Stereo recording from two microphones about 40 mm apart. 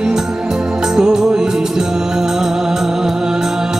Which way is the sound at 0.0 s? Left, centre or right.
Centre.